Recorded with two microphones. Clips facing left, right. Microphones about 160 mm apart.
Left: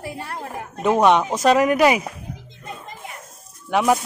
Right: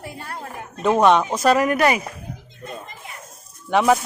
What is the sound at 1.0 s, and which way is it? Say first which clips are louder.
Speech: even; 15° left (ahead or behind).